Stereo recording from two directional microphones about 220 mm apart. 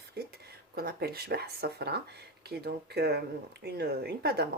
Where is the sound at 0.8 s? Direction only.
45° right (ahead or behind).